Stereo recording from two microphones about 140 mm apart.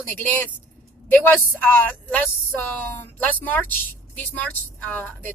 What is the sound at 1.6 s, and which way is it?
A woman's voice, 10° left (ahead or behind).